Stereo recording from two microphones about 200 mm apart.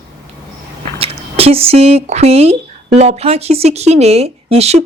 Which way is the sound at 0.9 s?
30° right (ahead or behind).